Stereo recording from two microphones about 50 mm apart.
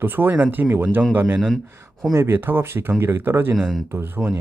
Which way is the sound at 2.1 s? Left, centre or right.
Right.